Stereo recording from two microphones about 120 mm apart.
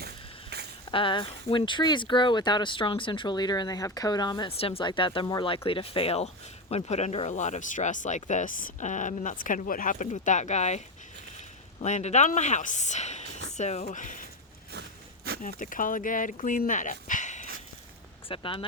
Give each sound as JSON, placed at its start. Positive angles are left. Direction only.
{"t": 0.9, "sound": "speech", "side_deg": 45}
{"t": 4.4, "sound": "speech", "side_deg": 50}
{"t": 5.2, "sound": "speech", "side_deg": 30}
{"t": 5.6, "sound": "speech", "side_deg": 50}
{"t": 15.5, "sound": "speech", "side_deg": 90}
{"t": 18.3, "sound": "speech", "side_deg": 45}